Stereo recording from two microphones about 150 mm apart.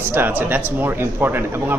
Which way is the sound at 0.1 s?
15° right (ahead or behind).